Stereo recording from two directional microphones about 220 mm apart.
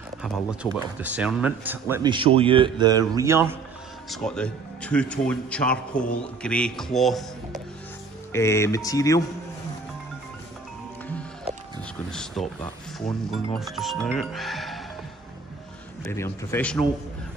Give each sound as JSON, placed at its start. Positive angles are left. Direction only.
{"t": 0.2, "sound": "speech", "side_deg": -5}
{"t": 2.0, "sound": "a man's voice", "side_deg": -25}
{"t": 4.1, "sound": "speech", "side_deg": 5}
{"t": 8.3, "sound": "speech", "side_deg": 10}
{"t": 12.1, "sound": "speech", "side_deg": 5}
{"t": 16.0, "sound": "speech", "side_deg": 10}